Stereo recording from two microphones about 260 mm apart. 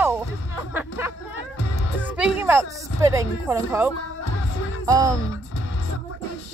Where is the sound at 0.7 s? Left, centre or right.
Centre.